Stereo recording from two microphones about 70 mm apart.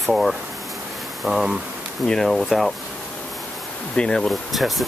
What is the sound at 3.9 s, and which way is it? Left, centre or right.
Speech, centre.